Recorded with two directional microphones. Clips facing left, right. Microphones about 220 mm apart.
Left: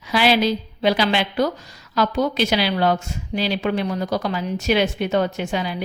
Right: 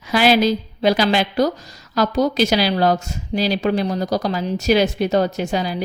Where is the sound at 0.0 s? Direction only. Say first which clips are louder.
Right 3 dB; 45° right (ahead or behind).